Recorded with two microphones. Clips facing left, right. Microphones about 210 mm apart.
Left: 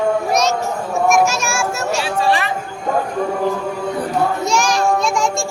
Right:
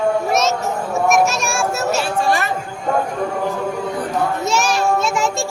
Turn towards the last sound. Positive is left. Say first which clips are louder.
# left 1 dB
turn(degrees=-5)  # may be behind; listen again after turning